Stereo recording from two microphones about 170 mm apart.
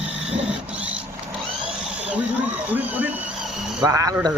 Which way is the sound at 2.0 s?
5° right (ahead or behind).